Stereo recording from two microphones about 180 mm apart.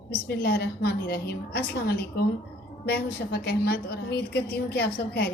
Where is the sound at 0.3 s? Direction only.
65° left (ahead or behind).